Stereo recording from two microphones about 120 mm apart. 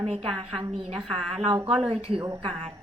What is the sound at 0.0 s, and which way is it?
A woman's voice, 50° right (ahead or behind).